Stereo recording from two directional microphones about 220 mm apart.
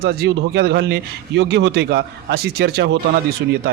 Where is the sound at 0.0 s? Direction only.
45° right (ahead or behind).